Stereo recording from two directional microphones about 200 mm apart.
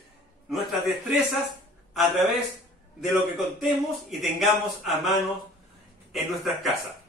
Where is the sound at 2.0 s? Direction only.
Centre (ahead or behind).